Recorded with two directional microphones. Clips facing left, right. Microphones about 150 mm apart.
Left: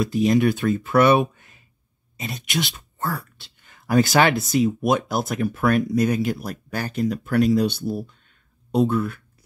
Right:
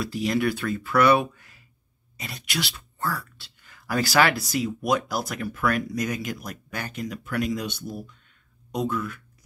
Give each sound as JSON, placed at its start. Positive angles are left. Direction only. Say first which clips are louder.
{"t": 0.0, "sound": "speech", "louder": "left 6 dB", "side_deg": 20}